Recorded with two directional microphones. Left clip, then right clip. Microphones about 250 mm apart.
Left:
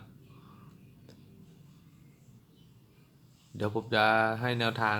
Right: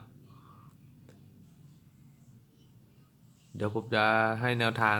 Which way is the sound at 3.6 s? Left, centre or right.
Centre.